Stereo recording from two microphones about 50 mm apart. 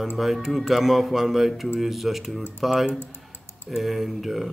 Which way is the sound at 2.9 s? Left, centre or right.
Left.